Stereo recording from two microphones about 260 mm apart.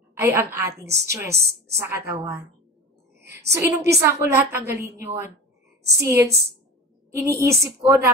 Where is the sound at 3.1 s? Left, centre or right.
Right.